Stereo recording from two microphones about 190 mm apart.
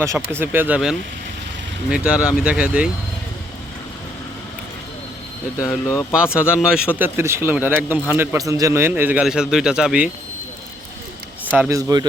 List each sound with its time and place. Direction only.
0.0 s speech: 15° right (ahead or behind)
5.9 s speech: 15° left (ahead or behind)
6.3 s speech: 5° right (ahead or behind)
11.5 s speech: 10° right (ahead or behind)